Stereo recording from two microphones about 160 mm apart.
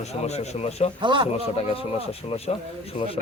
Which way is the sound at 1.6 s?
40° left (ahead or behind).